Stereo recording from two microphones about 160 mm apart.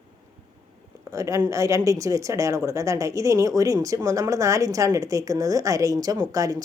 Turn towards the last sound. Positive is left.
turn(degrees=-20)  # may be behind; listen again after turning